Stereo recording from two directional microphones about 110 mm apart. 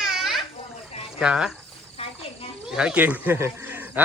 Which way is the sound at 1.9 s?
60° left (ahead or behind).